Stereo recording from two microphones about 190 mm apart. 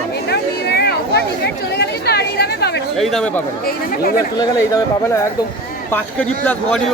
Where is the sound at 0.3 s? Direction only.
60° left (ahead or behind).